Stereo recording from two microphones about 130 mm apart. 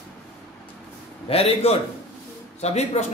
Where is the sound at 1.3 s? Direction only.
50° left (ahead or behind).